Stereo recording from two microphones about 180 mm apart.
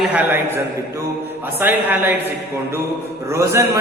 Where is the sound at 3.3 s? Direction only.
15° right (ahead or behind).